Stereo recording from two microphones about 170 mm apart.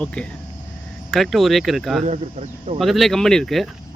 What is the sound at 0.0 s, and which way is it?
Speech, 5° left (ahead or behind).